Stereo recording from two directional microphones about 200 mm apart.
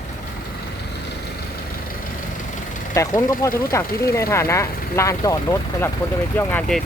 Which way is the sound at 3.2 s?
15° left (ahead or behind).